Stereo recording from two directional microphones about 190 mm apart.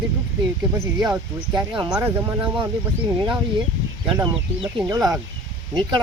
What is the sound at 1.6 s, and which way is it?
Speech, 25° right (ahead or behind).